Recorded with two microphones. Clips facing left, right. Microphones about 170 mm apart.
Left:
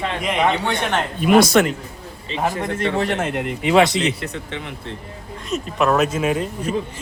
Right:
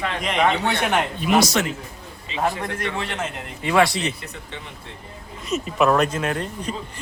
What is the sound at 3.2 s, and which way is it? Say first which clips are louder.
Speech: left 7 dB; 65° left (ahead or behind).